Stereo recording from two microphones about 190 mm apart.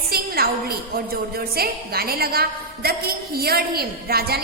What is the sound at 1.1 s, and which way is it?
A woman's voice, 55° right (ahead or behind).